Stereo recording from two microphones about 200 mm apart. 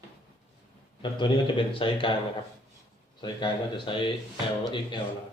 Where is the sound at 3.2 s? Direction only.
25° left (ahead or behind).